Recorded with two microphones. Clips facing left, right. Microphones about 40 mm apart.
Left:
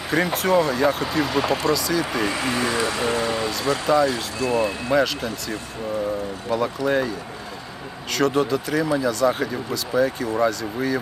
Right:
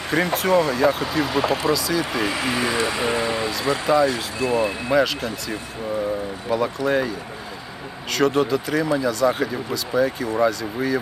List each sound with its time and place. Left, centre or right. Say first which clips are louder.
0.1 s speech: right 1 dB; centre
2.4 s speech: right 1 dB; centre
3.9 s speech: right 1 dB; centre
4.4 s speech: right 1 dB; right
4.9 s speech: right 1 dB; centre
6.5 s speech: right 1 dB; centre
8.1 s speech: right 1 dB; centre